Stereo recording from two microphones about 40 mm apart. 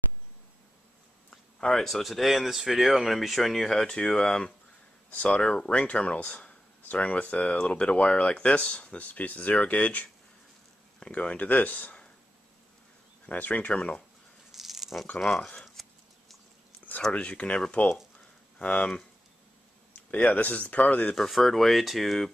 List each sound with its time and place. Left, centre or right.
1.3 s speech: centre
3.6 s speech: centre
5.1 s speech: left
9.5 s speech: left
11.1 s speech: left
13.3 s speech: left
14.5 s a sound: centre
15.1 s speech: centre
15.6 s a sound: centre
17.1 s speech: left
20.1 s speech: left
21.0 s speech: centre
21.3 s speech: centre